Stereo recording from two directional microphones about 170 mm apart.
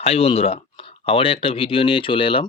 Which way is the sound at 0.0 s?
35° left (ahead or behind).